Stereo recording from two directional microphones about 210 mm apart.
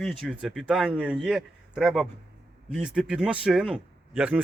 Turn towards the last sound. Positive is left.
turn(degrees=-5)  # may be behind; listen again after turning